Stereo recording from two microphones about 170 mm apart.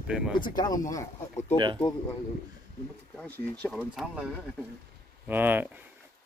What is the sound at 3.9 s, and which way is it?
Speech, centre (ahead or behind).